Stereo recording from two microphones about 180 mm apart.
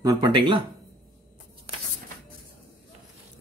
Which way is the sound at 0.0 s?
25° right (ahead or behind).